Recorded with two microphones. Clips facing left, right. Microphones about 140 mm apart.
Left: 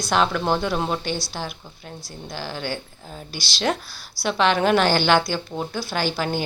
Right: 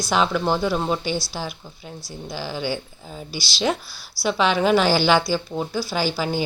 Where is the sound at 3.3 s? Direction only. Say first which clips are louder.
Right 3 dB; 45° left (ahead or behind).